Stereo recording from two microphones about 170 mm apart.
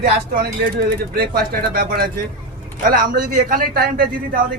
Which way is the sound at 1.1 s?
65° right (ahead or behind).